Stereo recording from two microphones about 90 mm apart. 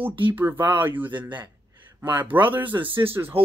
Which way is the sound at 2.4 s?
20° right (ahead or behind).